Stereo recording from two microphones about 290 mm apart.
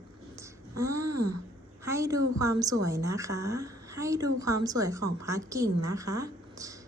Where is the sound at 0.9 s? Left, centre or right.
Right.